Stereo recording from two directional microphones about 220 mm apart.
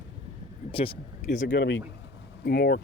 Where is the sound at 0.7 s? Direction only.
25° left (ahead or behind).